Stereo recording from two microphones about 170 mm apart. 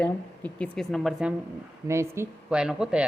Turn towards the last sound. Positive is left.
turn(degrees=-5)  # may be behind; listen again after turning